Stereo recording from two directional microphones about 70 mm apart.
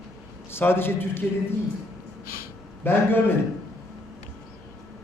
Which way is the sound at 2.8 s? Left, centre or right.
Left.